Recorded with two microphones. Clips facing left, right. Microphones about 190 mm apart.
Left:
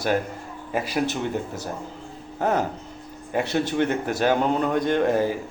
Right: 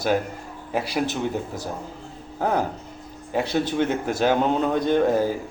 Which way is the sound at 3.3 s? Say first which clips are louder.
Even; 10° right (ahead or behind).